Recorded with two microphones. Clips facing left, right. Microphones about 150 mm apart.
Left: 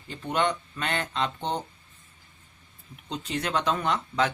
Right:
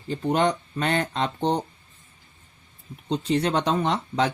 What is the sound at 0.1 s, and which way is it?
Speech, 40° right (ahead or behind).